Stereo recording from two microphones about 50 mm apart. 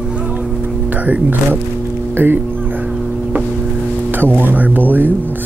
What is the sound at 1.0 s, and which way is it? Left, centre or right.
Speech, right.